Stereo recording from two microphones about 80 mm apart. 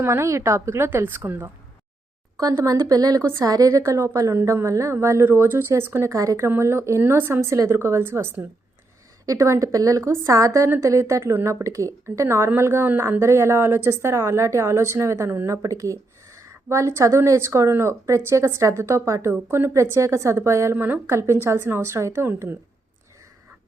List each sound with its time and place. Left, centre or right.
0.0 s a woman's voice: right
2.4 s a woman's voice: right
9.2 s a woman's voice: right
15.6 s a woman's voice: right